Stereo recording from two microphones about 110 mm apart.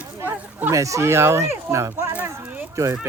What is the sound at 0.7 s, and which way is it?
Speech, 30° right (ahead or behind).